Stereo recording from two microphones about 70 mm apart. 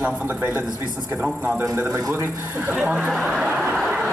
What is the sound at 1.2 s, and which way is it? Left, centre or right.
Speech, centre.